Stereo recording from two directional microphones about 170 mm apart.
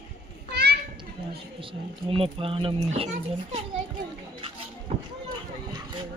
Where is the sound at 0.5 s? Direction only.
70° right (ahead or behind).